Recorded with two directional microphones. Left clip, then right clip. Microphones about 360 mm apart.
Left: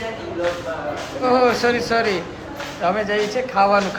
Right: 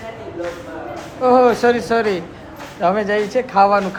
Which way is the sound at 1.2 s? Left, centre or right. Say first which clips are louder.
Right 4 dB; centre.